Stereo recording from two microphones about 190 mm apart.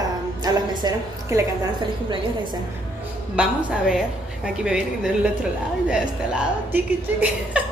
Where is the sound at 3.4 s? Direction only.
5° right (ahead or behind).